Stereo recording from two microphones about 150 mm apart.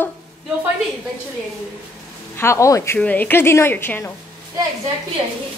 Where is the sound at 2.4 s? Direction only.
20° left (ahead or behind).